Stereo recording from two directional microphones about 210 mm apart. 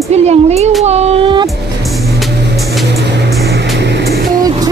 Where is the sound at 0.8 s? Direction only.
30° right (ahead or behind).